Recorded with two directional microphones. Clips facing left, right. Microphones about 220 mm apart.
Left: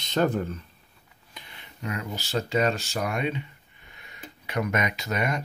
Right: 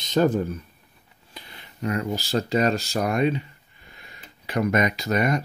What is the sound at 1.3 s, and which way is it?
Speech, 35° right (ahead or behind).